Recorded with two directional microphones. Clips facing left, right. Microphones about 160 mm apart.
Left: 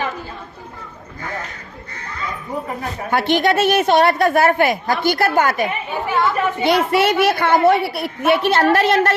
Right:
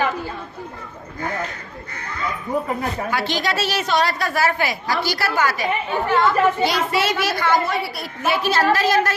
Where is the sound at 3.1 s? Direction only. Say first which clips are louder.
Left 10 dB; 55° left (ahead or behind).